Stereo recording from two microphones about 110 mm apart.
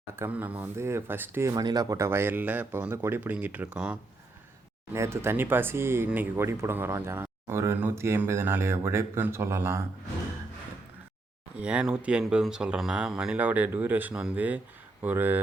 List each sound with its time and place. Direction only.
0.2 s speech: 15° right (ahead or behind)
4.9 s speech: 25° right (ahead or behind)
11.5 s speech: 10° right (ahead or behind)